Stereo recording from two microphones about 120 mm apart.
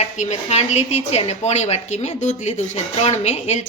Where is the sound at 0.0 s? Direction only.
70° left (ahead or behind).